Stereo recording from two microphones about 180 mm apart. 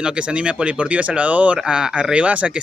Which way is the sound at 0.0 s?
5° right (ahead or behind).